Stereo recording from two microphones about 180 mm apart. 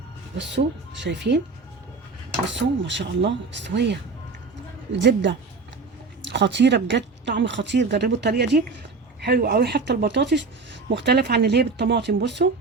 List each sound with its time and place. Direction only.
0.3 s speech: 80° right
2.5 s speech: 85° right
10.8 s speech: 65° right (ahead or behind)